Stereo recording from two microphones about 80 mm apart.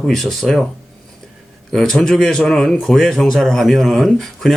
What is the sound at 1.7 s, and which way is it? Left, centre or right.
Speech, centre.